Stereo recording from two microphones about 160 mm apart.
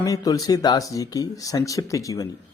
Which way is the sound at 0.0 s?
20° left (ahead or behind).